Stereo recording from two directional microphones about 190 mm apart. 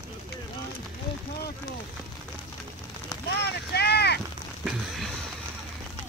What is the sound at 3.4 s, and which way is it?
Vehicle, 60° left (ahead or behind).